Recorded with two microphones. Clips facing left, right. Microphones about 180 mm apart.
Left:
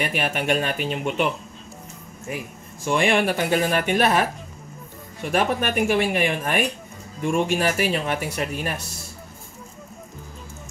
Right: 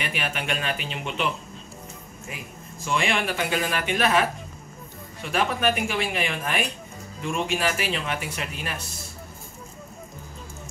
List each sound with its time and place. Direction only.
0.0 s speech: 45° left (ahead or behind)
2.8 s speech: 50° left (ahead or behind)